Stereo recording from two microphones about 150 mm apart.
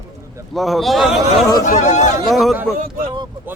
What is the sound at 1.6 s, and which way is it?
Speech, 55° left (ahead or behind).